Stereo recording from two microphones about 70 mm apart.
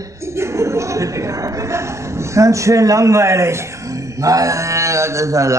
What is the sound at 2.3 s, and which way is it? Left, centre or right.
A man's voice, right.